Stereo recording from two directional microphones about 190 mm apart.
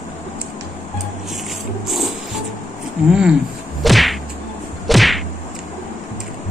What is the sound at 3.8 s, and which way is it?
Whip, centre (ahead or behind).